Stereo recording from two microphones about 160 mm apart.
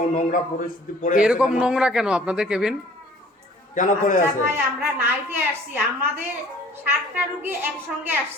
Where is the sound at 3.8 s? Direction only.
50° left (ahead or behind).